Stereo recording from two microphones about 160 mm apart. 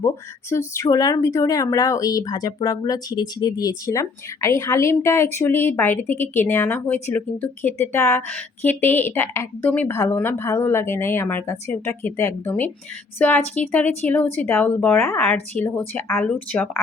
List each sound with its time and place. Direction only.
0.5 s speech: 20° left (ahead or behind)
15.2 s speech: 5° left (ahead or behind)
16.0 s speech: 15° left (ahead or behind)